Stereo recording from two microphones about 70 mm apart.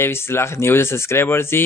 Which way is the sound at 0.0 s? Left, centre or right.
Left.